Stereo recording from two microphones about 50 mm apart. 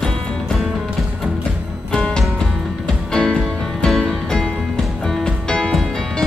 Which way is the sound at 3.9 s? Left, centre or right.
Centre.